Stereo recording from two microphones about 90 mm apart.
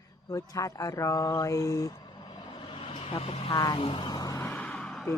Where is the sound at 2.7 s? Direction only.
75° left (ahead or behind); by 4.4 s 45° left (ahead or behind).